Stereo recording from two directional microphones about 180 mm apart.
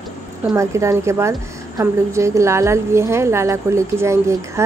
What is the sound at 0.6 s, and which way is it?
A woman's voice, 15° right (ahead or behind).